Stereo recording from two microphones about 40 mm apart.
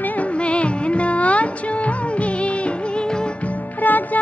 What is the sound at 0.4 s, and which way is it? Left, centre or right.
Music, left.